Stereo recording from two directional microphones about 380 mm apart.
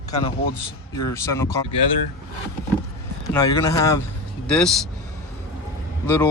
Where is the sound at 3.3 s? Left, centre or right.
Centre.